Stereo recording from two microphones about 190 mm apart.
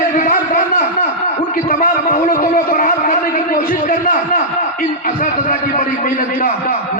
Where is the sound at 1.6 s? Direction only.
45° left (ahead or behind).